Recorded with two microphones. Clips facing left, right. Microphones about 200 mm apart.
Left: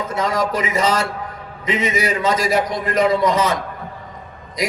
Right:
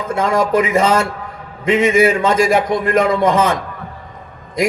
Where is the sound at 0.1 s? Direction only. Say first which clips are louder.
Right 7 dB; 50° right (ahead or behind).